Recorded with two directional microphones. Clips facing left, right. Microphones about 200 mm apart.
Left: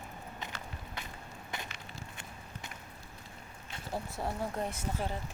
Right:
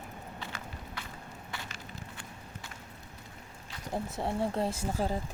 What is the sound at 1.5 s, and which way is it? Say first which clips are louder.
Crushing: left 1 dB; 20° left (ahead or behind).